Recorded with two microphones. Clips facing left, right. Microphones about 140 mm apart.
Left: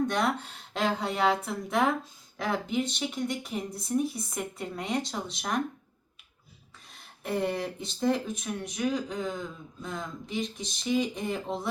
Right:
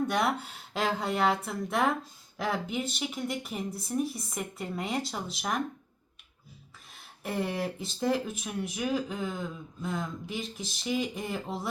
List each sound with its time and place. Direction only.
0.1 s speech: 5° right (ahead or behind)
6.9 s speech: 5° right (ahead or behind)